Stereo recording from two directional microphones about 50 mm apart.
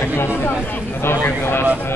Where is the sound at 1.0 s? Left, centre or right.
Left.